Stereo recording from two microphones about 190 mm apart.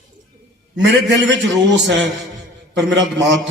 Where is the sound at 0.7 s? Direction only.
65° right (ahead or behind).